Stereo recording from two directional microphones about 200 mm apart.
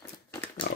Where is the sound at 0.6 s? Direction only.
50° left (ahead or behind).